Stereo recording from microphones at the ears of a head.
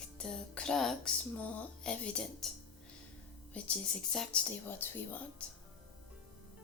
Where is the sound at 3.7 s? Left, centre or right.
Left.